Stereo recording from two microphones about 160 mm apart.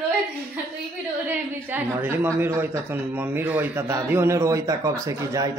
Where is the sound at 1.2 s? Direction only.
10° right (ahead or behind).